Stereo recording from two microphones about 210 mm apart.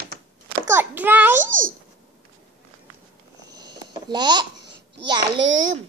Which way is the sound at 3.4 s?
20° right (ahead or behind).